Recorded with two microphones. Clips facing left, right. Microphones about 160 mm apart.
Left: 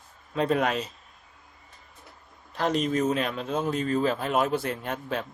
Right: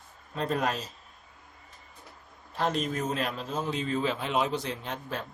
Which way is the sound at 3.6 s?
45° left (ahead or behind).